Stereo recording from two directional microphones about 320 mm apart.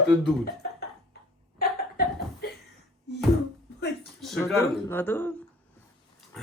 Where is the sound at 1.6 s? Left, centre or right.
Left.